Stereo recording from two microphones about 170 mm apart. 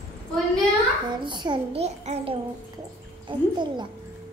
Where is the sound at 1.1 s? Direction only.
25° right (ahead or behind).